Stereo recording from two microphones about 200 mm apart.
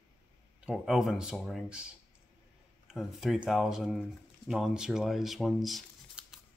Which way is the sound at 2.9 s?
Centre (ahead or behind).